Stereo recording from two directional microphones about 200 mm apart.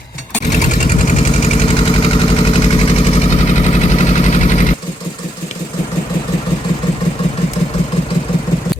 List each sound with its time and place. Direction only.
0.5 s engine: 40° left (ahead or behind)